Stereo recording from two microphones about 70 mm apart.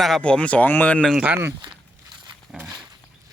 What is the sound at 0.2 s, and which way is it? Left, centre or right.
Speech, centre.